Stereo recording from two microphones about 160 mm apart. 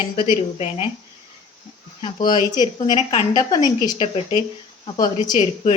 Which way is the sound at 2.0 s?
30° left (ahead or behind).